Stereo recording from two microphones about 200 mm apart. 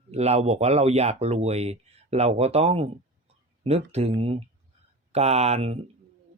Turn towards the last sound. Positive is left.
turn(degrees=-30)  # may be behind; listen again after turning